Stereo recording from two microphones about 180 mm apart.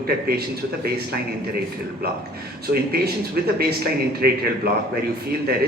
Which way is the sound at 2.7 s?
60° right (ahead or behind).